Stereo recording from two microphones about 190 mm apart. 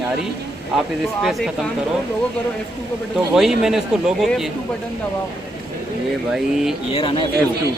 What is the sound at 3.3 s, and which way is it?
Speech, centre (ahead or behind).